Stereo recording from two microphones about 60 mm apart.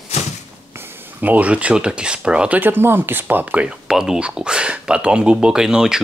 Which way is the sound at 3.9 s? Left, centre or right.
Centre.